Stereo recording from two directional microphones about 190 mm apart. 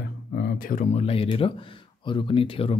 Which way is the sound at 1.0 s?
30° left (ahead or behind).